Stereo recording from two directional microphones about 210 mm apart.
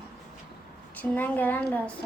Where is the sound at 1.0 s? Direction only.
10° left (ahead or behind).